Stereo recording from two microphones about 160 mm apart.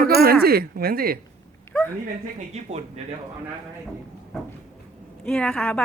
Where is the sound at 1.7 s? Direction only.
5° left (ahead or behind).